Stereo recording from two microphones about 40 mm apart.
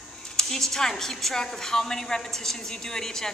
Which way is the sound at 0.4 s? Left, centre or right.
Centre.